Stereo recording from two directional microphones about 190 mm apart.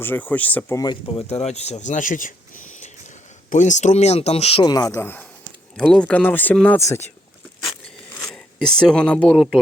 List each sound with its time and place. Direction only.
0.0 s speech: 10° left (ahead or behind)
0.8 s speech: 25° left (ahead or behind)
7.6 s a sound: 5° left (ahead or behind)
8.8 s speech: 5° left (ahead or behind)